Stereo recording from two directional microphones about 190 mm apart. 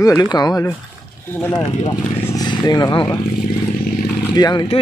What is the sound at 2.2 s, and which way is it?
Speech, 20° left (ahead or behind).